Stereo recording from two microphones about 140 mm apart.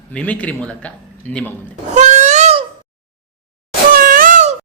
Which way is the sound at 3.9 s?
85° right.